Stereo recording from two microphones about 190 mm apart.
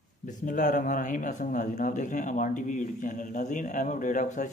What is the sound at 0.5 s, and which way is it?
Speech, 40° left (ahead or behind).